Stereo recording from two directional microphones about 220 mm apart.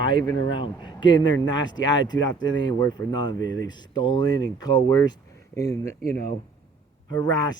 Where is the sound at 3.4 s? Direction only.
60° left (ahead or behind).